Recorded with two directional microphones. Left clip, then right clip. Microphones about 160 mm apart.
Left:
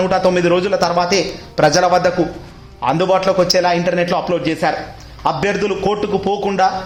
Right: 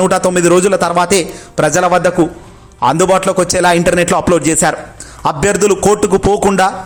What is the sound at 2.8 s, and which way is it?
Speech, 35° right (ahead or behind).